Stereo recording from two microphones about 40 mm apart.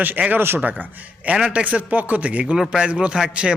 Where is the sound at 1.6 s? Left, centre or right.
Right.